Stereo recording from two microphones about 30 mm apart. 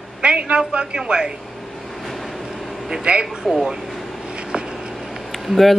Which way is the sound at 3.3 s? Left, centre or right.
Centre.